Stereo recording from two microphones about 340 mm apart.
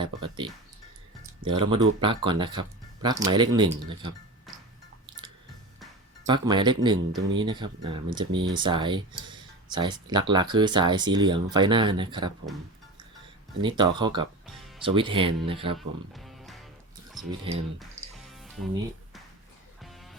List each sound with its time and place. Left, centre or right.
0.0 s speech: centre
6.2 s speech: centre
13.6 s speech: centre
14.4 s music: centre
14.8 s speech: centre
16.1 s music: centre
17.5 s speech: centre
18.3 s music: centre
19.8 s music: centre